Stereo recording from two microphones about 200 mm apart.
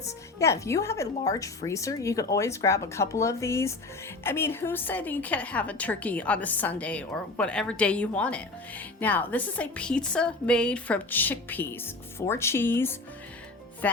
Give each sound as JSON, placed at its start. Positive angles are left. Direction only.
{"t": 0.0, "sound": "a woman's voice", "side_deg": 15}